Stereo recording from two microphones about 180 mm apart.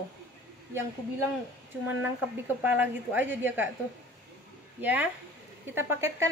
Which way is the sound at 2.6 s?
10° right (ahead or behind).